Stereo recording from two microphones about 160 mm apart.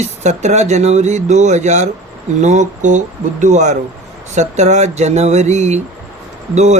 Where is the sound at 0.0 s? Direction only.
45° right (ahead or behind).